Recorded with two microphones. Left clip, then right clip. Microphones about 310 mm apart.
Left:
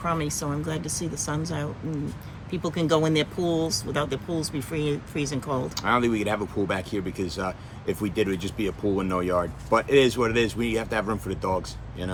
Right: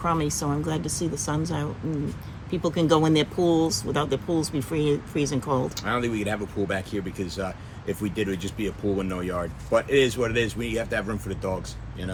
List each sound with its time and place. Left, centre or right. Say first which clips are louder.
0.0 s speech: right 2 dB; centre
5.7 s speech: left 4 dB; centre